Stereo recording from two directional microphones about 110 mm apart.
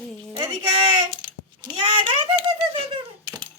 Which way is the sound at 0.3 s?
35° right (ahead or behind).